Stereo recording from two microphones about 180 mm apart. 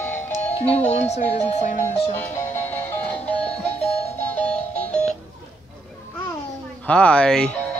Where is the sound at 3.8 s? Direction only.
40° left (ahead or behind).